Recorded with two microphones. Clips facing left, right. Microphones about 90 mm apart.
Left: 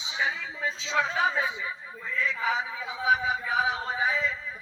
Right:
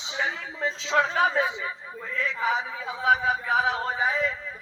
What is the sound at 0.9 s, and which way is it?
Speech, 60° right (ahead or behind).